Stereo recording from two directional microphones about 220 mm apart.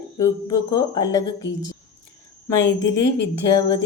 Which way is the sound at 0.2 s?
15° left (ahead or behind).